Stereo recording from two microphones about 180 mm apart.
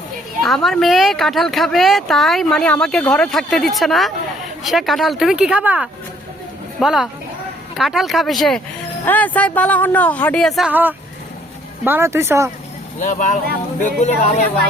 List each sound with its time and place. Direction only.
0.4 s speech: centre (ahead or behind); by 12.5 s 15° right (ahead or behind)
13.0 s speech: 45° left (ahead or behind)